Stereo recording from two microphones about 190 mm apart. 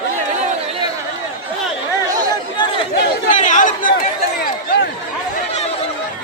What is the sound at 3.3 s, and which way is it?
Chatter, 40° left (ahead or behind).